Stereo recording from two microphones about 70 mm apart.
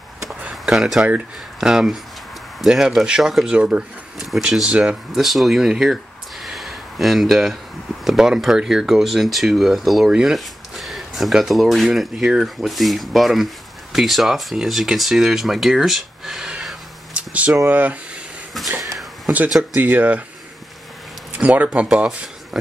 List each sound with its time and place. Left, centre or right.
0.4 s a sound: centre
1.6 s speech: centre
4.2 s speech: centre
4.5 s speech: centre
5.1 s speech: centre
6.4 s a sound: centre
8.0 s speech: centre; by 17.9 s right
18.8 s a sound: centre
19.7 s speech: right
21.3 s speech: centre